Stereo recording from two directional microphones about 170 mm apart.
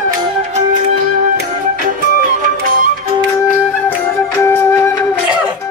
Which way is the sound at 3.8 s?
15° left (ahead or behind).